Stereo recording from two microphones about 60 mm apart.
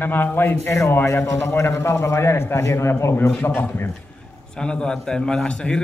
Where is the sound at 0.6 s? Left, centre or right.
Left.